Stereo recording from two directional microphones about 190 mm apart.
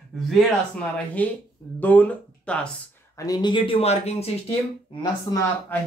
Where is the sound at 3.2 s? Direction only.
20° left (ahead or behind).